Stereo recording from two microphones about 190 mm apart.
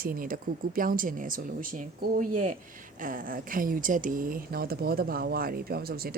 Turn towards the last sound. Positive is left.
turn(degrees=-55)  # may be behind; listen again after turning